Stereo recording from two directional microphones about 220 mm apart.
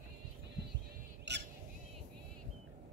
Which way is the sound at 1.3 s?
50° right (ahead or behind).